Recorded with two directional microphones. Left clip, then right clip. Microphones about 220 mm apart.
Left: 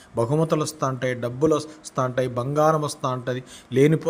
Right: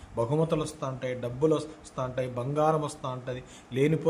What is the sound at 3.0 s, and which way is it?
A man's voice, 25° left (ahead or behind).